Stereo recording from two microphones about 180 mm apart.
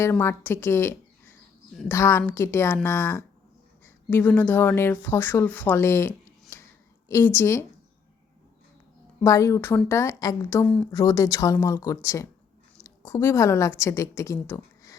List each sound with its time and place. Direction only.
0.0 s speech: 15° left (ahead or behind)
6.5 s a sound: 15° left (ahead or behind)
7.1 s speech: 10° left (ahead or behind)
9.2 s a woman's voice: 15° left (ahead or behind)